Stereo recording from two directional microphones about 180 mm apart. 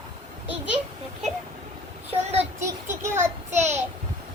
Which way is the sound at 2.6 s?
15° right (ahead or behind).